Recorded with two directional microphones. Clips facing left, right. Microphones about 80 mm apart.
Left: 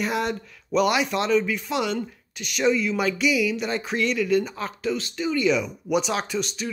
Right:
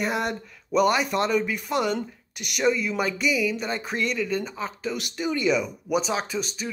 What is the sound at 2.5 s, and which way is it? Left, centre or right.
Speech, centre.